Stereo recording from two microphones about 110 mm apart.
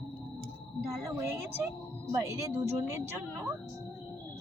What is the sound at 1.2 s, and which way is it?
A woman's voice, 20° right (ahead or behind).